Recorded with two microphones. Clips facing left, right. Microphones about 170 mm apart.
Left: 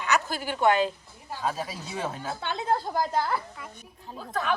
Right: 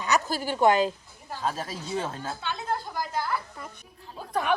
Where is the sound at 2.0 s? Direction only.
15° left (ahead or behind).